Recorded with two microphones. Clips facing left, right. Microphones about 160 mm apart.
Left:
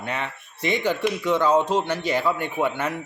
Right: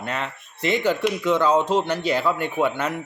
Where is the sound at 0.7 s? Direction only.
10° left (ahead or behind).